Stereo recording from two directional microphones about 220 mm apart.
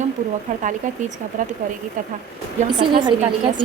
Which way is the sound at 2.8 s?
20° right (ahead or behind).